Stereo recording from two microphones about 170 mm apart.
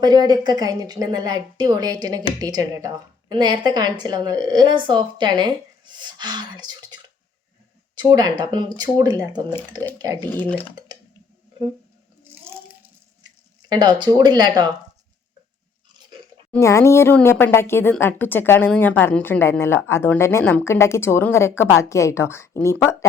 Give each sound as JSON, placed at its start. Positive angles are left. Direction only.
{"t": 0.0, "sound": "a woman's voice", "side_deg": -25}
{"t": 10.3, "sound": "a woman's voice", "side_deg": 10}
{"t": 10.9, "sound": "a sound", "side_deg": -25}
{"t": 13.7, "sound": "a woman's voice", "side_deg": -25}
{"t": 16.5, "sound": "a woman's voice", "side_deg": 15}